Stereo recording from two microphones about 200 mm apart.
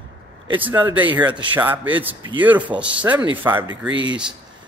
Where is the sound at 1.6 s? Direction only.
10° right (ahead or behind).